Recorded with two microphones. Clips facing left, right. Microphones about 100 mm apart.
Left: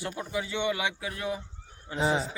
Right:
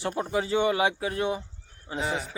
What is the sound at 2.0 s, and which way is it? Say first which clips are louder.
Speech: left 4 dB; 20° left (ahead or behind).